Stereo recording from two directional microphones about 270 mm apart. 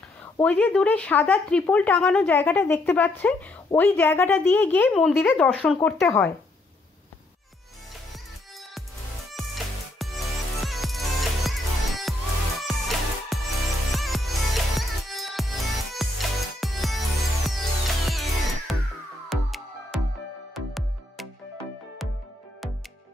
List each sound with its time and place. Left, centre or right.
0.2 s speech: centre
9.3 s music: centre